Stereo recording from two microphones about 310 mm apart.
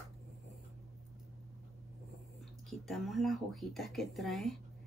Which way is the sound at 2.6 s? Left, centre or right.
Centre.